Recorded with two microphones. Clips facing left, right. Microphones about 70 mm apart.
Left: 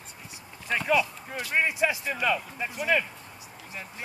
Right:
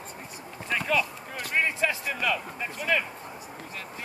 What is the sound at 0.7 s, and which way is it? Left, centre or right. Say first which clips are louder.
Speech: left 2 dB; centre.